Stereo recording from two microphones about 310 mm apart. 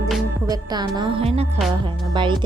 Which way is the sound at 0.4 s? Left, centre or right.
Centre.